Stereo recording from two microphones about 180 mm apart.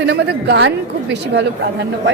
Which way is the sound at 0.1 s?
75° right (ahead or behind).